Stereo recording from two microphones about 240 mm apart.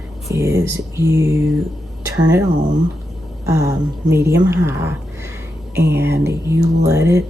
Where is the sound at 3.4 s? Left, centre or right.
Centre.